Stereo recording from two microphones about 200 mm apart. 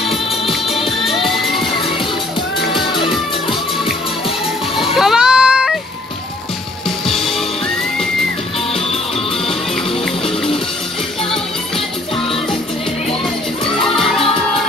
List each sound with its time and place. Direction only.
0.7 s music: 30° left (ahead or behind)
1.0 s music: centre (ahead or behind)
4.9 s baby cry: centre (ahead or behind)
7.1 s music: centre (ahead or behind)
13.9 s music: centre (ahead or behind)